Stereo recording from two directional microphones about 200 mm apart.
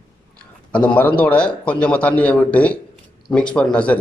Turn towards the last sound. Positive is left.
turn(degrees=5)  # may be behind; listen again after turning